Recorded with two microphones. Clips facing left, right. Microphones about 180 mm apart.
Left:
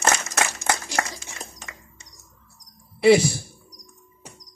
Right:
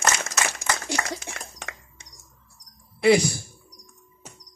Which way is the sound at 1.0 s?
60° right (ahead or behind).